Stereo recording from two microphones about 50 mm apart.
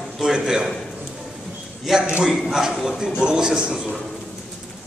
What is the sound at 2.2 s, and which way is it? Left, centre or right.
A man's voice, centre.